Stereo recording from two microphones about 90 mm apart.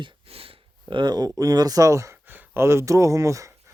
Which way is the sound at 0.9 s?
55° right (ahead or behind).